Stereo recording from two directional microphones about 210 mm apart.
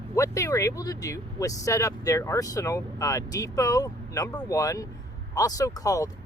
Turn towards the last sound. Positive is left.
turn(degrees=15)  # may be behind; listen again after turning